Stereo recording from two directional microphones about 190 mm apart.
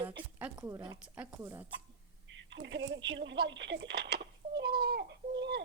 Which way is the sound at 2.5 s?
70° right (ahead or behind).